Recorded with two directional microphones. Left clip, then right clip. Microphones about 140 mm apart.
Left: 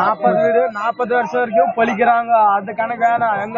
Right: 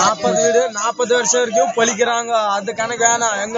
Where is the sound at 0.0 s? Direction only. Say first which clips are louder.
Left 1 dB; 40° right (ahead or behind).